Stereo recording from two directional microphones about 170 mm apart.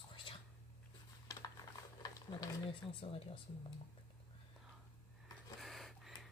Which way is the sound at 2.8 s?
30° left (ahead or behind).